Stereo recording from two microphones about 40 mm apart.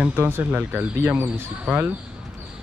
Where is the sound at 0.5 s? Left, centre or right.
Right.